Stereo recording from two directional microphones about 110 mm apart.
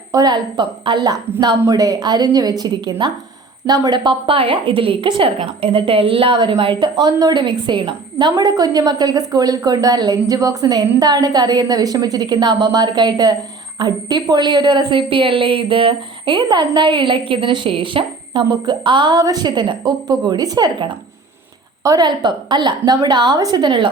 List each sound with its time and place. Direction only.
0.1 s a woman's voice: 35° right (ahead or behind)
8.4 s a woman's voice: 35° right (ahead or behind)